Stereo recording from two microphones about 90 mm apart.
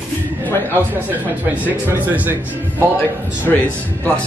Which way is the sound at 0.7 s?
20° right (ahead or behind).